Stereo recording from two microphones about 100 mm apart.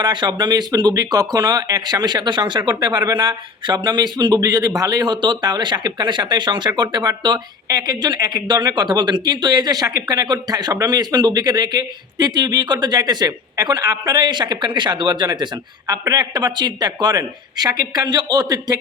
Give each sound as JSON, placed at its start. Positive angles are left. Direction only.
{"t": 0.0, "sound": "a man's voice", "side_deg": -50}